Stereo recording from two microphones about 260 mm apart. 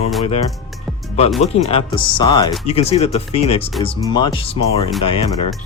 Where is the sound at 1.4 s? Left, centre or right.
Left.